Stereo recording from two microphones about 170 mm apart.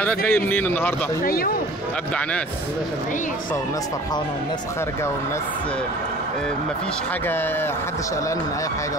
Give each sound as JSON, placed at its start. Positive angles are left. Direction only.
{"t": 0.0, "sound": "a man's voice", "side_deg": 10}
{"t": 1.2, "sound": "speech", "side_deg": 60}